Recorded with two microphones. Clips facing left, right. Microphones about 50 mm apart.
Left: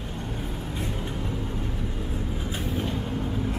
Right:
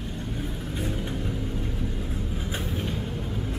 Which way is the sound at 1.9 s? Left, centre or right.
Centre.